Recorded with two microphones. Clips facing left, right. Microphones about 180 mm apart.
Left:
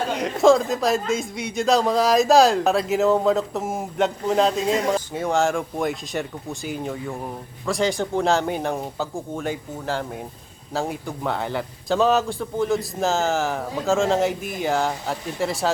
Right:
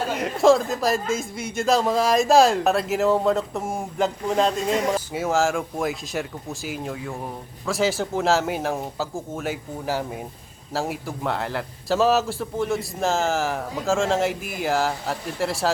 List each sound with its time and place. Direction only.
0.1 s speech: centre (ahead or behind)